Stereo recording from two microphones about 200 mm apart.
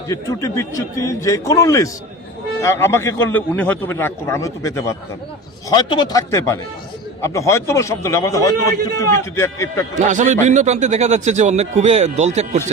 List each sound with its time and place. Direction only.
0.1 s a man's voice: 15° left (ahead or behind)
10.1 s speech: 35° right (ahead or behind)